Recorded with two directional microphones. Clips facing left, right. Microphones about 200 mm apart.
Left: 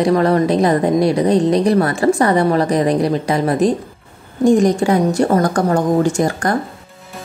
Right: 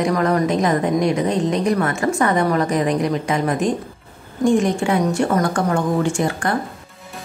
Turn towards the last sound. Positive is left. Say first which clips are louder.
# left 4 dB
turn(degrees=40)  # may be behind; listen again after turning